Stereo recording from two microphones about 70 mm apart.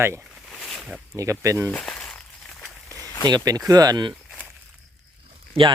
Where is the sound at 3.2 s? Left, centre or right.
Right.